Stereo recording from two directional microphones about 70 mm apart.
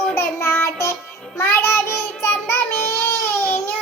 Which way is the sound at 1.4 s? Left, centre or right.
Left.